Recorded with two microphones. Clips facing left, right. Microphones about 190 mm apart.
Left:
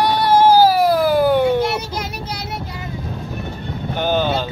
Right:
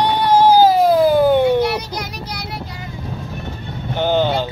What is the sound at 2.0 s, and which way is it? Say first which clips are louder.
Child singing: left 1 dB; 25° left (ahead or behind).